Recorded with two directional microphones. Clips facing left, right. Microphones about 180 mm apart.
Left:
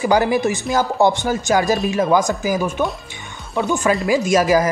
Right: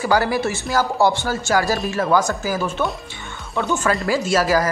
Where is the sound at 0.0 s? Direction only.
20° left (ahead or behind).